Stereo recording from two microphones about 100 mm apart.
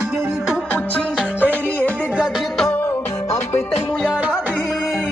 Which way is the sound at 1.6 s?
15° left (ahead or behind).